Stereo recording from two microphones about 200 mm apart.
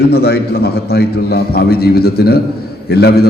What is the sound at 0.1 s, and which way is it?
A man's voice, 50° left (ahead or behind).